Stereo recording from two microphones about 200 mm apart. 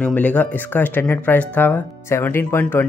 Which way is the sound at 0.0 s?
5° left (ahead or behind).